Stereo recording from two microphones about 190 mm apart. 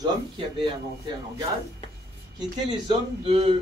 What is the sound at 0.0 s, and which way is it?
Speech, 25° right (ahead or behind).